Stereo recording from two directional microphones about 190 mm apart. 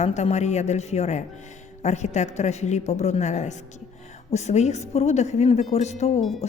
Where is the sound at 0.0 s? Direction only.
35° left (ahead or behind).